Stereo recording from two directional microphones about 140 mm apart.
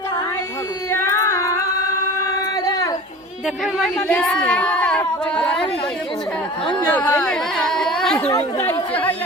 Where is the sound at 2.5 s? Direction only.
25° left (ahead or behind).